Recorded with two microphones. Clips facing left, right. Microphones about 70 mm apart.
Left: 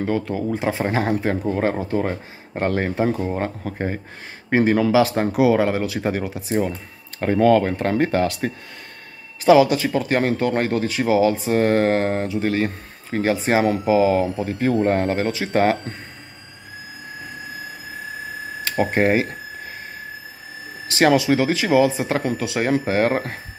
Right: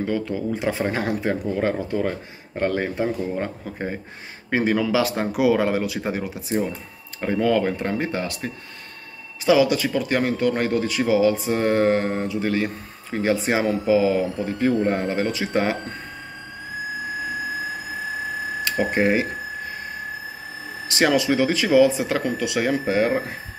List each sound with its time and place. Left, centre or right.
0.0 s speech: left
0.5 s speech: left
3.7 s speech: left
7.3 s speech: left
7.8 s speech: left
9.4 s speech: left
12.3 s speech: left
18.6 s a sound: left
20.9 s speech: left
23.0 s speech: left